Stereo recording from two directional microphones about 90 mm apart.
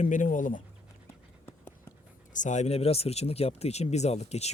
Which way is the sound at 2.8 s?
90° left.